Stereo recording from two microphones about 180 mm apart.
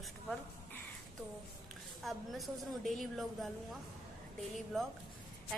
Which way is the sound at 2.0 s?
Centre (ahead or behind).